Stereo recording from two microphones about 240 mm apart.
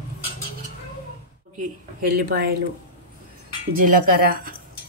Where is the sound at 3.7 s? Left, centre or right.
Right.